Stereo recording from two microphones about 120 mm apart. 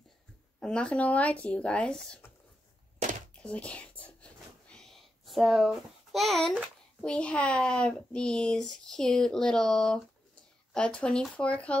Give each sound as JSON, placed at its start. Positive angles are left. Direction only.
{"t": 0.6, "sound": "speech", "side_deg": 10}
{"t": 3.4, "sound": "whispering", "side_deg": 10}
{"t": 7.0, "sound": "speech", "side_deg": 10}